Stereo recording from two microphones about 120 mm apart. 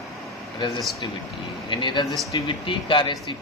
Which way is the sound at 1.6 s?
40° left (ahead or behind).